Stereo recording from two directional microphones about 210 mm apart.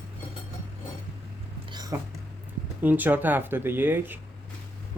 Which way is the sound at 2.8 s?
10° right (ahead or behind).